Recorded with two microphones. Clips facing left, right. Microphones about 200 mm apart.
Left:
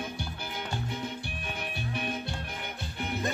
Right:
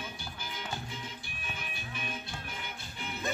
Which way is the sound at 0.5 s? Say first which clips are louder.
Left 5 dB; 65° left (ahead or behind).